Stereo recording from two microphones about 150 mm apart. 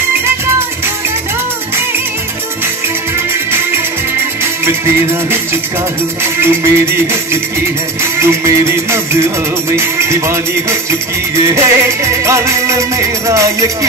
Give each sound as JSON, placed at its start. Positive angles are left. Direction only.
{"t": 6.2, "sound": "music", "side_deg": -15}
{"t": 8.2, "sound": "music", "side_deg": -20}
{"t": 11.4, "sound": "music", "side_deg": -20}